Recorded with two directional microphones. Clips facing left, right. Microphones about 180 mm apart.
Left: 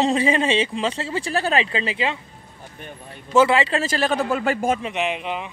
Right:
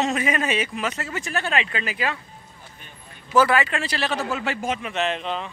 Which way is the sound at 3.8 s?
45° left (ahead or behind).